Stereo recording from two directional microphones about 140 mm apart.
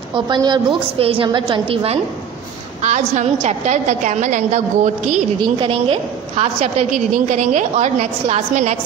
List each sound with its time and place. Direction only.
0.1 s a woman's voice: 30° right (ahead or behind)
2.8 s a woman's voice: 55° right (ahead or behind)
5.4 s a woman's voice: 40° right (ahead or behind); by 8.7 s 55° right (ahead or behind)